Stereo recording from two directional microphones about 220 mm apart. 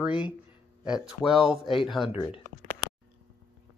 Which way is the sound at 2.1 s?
25° left (ahead or behind).